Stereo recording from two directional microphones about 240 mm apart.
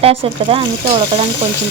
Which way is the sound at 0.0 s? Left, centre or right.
Right.